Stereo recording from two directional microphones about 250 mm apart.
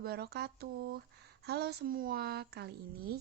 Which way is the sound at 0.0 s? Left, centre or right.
Right.